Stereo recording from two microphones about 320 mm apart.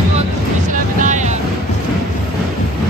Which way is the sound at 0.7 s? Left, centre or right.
Right.